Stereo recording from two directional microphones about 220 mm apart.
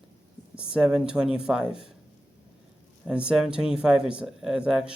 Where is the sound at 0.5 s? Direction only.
5° right (ahead or behind).